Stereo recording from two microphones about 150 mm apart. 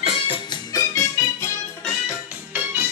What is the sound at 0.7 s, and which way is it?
Music, 20° left (ahead or behind).